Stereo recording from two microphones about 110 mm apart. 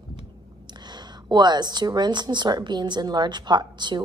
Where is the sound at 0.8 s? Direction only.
40° right (ahead or behind).